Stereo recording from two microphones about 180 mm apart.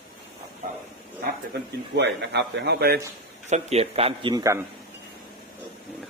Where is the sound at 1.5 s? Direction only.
75° right (ahead or behind).